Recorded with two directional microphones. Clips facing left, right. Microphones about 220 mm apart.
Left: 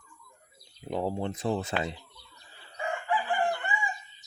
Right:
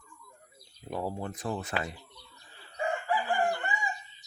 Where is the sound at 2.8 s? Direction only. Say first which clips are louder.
Right 1 dB; 40° right (ahead or behind).